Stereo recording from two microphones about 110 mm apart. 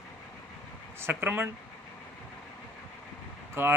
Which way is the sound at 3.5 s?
20° right (ahead or behind).